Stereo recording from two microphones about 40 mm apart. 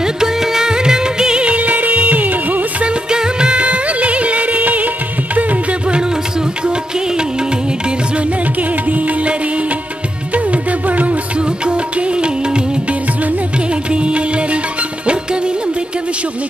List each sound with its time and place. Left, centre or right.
0.0 s music: centre; by 2.6 s right
2.8 s music: right
6.6 s music: right
8.2 s music: right
11.3 s music: right
13.7 s music: right